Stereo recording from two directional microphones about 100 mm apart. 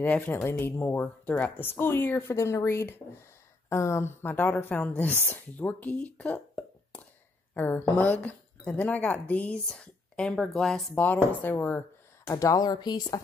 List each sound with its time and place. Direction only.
0.0 s a woman's voice: 20° left (ahead or behind)
11.4 s speech: 20° left (ahead or behind)
12.3 s speech: 35° left (ahead or behind)